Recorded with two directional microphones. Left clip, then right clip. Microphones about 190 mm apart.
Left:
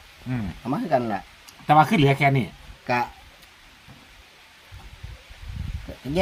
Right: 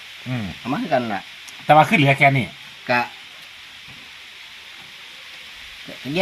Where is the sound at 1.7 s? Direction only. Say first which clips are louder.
Right 4 dB; 40° right (ahead or behind).